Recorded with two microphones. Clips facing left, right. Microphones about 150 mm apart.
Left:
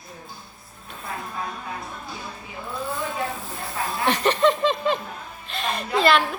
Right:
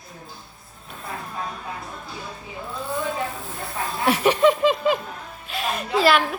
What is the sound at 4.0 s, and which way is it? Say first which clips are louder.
Speech: right 2 dB; 5° right (ahead or behind).